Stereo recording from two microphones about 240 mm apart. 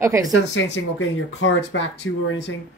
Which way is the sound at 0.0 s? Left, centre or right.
Centre.